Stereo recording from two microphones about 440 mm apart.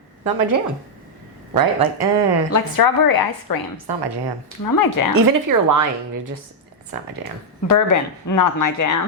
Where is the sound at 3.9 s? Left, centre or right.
Right.